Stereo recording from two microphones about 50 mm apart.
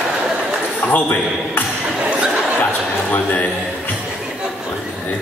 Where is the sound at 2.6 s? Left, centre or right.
Left.